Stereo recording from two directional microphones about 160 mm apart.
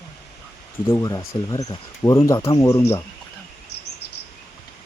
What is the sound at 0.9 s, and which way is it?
Speech, 20° left (ahead or behind).